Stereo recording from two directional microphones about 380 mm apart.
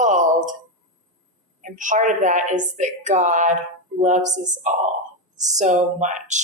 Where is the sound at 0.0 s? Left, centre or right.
Centre.